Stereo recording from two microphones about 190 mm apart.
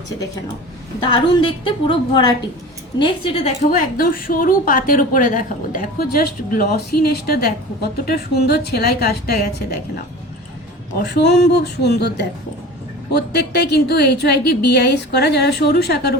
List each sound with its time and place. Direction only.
1.0 s a woman's voice: 25° left (ahead or behind); by 9.5 s 55° left (ahead or behind)
10.9 s a woman's voice: 60° left (ahead or behind)